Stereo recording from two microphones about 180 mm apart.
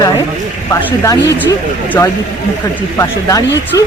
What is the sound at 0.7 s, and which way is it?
Speech, 20° left (ahead or behind).